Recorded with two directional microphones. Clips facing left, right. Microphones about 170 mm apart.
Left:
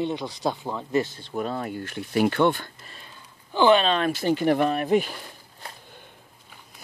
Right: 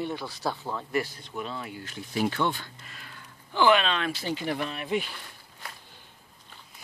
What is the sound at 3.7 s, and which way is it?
Speech, 40° left (ahead or behind).